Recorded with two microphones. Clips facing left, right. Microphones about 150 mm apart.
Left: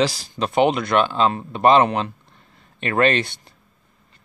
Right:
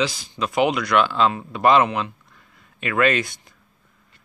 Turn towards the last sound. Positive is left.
turn(degrees=30)  # may be behind; listen again after turning